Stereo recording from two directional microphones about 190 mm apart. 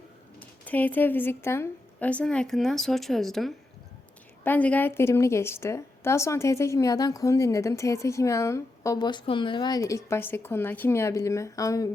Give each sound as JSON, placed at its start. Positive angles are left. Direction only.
{"t": 0.3, "sound": "a woman's voice", "side_deg": 10}